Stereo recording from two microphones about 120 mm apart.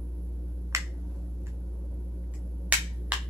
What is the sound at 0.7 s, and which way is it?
Finger snapping, 25° right (ahead or behind).